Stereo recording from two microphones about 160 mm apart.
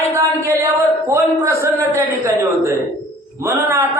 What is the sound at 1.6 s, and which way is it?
A man's voice, 20° right (ahead or behind).